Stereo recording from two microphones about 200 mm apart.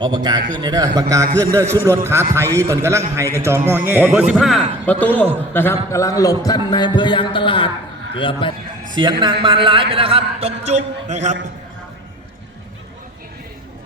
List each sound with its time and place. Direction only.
0.0 s a man's voice: 20° right (ahead or behind); by 8.5 s 25° left (ahead or behind)
9.2 s a man's voice: 25° right (ahead or behind)